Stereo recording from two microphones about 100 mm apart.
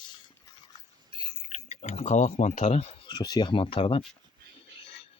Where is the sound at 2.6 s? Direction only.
90° left.